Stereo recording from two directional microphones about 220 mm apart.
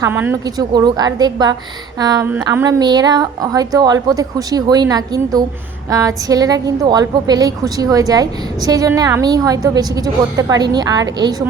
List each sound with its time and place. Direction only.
0.0 s a woman's voice: 10° right (ahead or behind)